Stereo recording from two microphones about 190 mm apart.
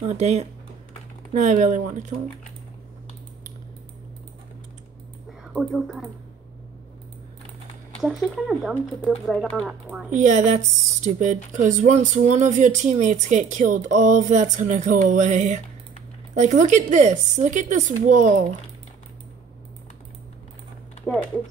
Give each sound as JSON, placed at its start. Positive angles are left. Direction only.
{"t": 0.1, "sound": "speech", "side_deg": -35}
{"t": 5.4, "sound": "speech", "side_deg": -5}
{"t": 8.0, "sound": "speech", "side_deg": -5}
{"t": 10.1, "sound": "speech", "side_deg": -40}